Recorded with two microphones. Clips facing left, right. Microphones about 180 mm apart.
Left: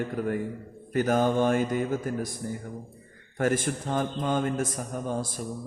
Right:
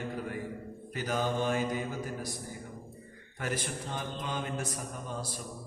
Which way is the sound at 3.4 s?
45° left (ahead or behind).